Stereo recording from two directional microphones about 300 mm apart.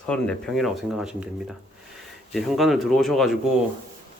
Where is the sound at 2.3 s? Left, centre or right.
Centre.